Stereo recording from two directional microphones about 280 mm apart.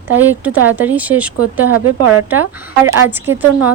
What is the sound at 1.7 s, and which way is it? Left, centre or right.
Speech, right.